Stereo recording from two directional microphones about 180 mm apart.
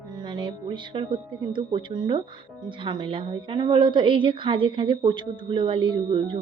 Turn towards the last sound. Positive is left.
turn(degrees=-30)  # may be behind; listen again after turning